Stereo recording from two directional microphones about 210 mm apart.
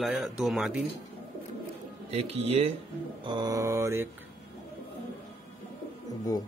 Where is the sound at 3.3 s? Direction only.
20° right (ahead or behind).